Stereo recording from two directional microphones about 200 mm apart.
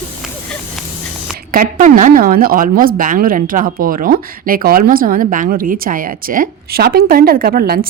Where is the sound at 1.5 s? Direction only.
45° right (ahead or behind).